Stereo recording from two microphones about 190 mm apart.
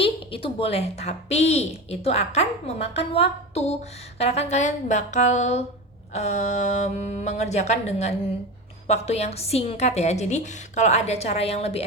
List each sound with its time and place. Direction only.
0.0 s speech: 30° left (ahead or behind)